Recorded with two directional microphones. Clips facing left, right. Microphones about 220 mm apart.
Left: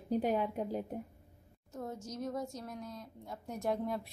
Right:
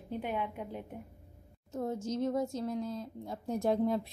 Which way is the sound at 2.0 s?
25° right (ahead or behind).